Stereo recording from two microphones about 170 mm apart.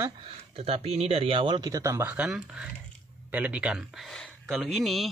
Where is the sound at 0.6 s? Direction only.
35° right (ahead or behind).